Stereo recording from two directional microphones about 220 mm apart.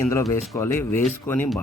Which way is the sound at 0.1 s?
15° left (ahead or behind).